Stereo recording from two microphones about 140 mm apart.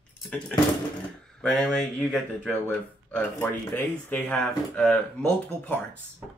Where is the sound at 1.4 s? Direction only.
5° left (ahead or behind).